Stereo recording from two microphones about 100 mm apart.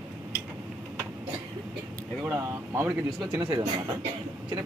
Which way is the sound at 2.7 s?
25° right (ahead or behind).